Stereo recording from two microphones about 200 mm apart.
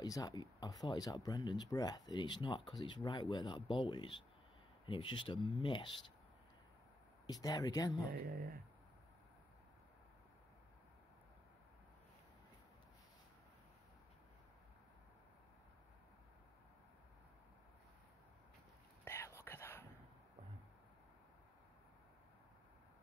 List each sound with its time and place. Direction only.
0.0 s speech: 20° left (ahead or behind)
7.2 s speech: 20° left (ahead or behind)
8.1 s speech: 45° right (ahead or behind)
19.0 s whispering: 15° left (ahead or behind)